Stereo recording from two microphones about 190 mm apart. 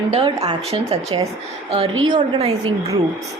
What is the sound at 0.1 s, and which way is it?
Speech, 25° right (ahead or behind).